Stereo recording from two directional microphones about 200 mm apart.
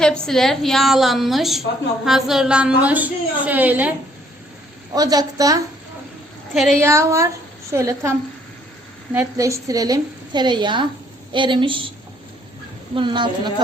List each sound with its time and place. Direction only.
0.0 s a woman's voice: 5° left (ahead or behind)
4.9 s a woman's voice: 20° right (ahead or behind)
6.5 s a woman's voice: centre (ahead or behind)
6.7 s a woman's voice: 15° right (ahead or behind)
9.1 s a woman's voice: 15° right (ahead or behind)
12.9 s a woman's voice: 25° right (ahead or behind)